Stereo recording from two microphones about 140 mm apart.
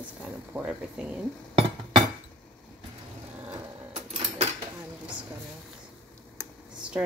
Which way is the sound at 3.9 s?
45° right (ahead or behind).